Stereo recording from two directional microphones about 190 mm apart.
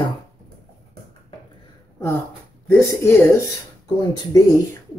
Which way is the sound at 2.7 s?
10° left (ahead or behind).